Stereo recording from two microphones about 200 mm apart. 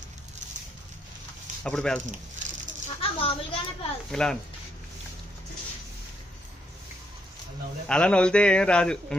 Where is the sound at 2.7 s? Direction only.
40° right (ahead or behind).